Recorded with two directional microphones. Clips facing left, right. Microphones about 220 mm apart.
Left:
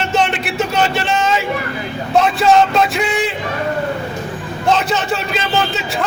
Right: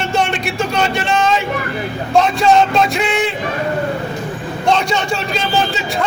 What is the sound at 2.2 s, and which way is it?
A man's voice, centre (ahead or behind).